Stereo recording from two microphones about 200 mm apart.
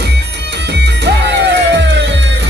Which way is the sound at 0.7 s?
60° right (ahead or behind).